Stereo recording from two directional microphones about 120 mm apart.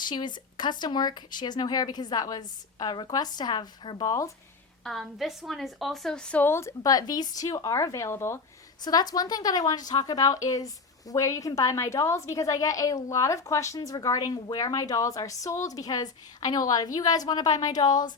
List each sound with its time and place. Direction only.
0.0 s speech: 40° left (ahead or behind)
4.8 s a woman's voice: centre (ahead or behind); by 8.4 s 20° left (ahead or behind)
8.8 s a woman's voice: 35° left (ahead or behind)